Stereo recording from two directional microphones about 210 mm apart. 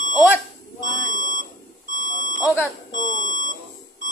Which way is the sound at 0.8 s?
40° right (ahead or behind).